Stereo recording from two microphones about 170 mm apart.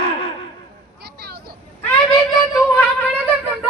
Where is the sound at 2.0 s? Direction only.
20° left (ahead or behind).